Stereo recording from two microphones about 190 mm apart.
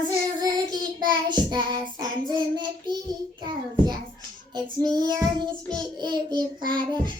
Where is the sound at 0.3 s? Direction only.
20° right (ahead or behind).